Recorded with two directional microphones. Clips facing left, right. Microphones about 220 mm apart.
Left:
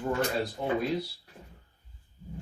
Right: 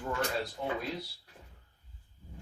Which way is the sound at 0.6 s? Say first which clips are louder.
Left 5 dB; 30° left (ahead or behind).